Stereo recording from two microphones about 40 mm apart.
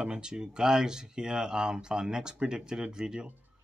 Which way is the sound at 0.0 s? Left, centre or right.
Right.